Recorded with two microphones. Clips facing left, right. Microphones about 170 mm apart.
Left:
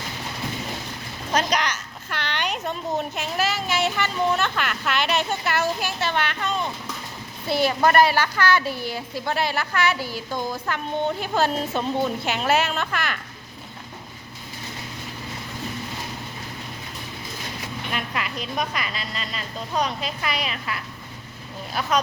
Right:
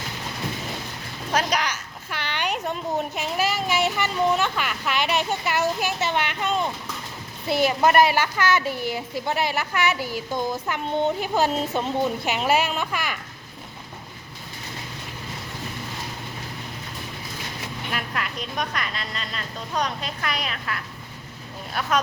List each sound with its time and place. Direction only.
1.3 s a sound: 5° right (ahead or behind)
3.2 s speech: 10° right (ahead or behind)
7.5 s speech: 15° right (ahead or behind)
17.9 s a woman's voice: centre (ahead or behind)